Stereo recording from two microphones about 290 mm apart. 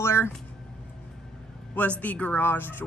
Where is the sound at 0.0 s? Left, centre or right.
Centre.